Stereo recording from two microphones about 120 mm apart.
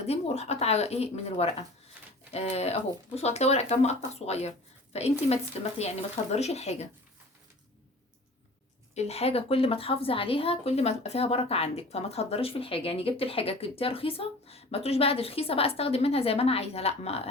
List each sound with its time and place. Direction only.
0.0 s a woman's voice: 60° left (ahead or behind)
9.0 s a woman's voice: 60° left (ahead or behind)